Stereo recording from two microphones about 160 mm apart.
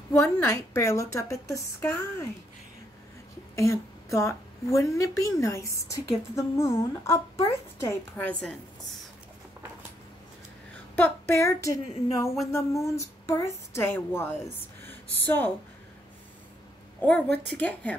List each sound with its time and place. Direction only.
0.1 s a woman's voice: 15° left (ahead or behind)
3.5 s a woman's voice: 20° left (ahead or behind)
11.0 s a woman's voice: 15° left (ahead or behind)
17.0 s a woman's voice: 10° left (ahead or behind)